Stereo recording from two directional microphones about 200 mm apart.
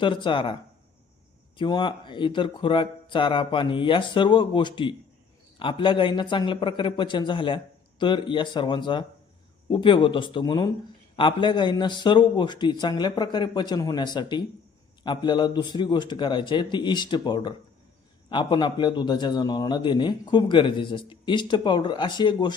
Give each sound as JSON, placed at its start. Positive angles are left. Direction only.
{"t": 0.0, "sound": "a man's voice", "side_deg": 25}